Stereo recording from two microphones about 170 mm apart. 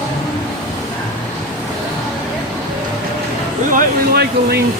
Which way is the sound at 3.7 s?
60° right (ahead or behind).